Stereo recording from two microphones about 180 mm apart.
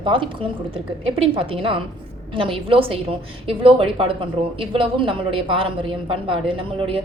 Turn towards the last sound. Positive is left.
turn(degrees=-30)  # may be behind; listen again after turning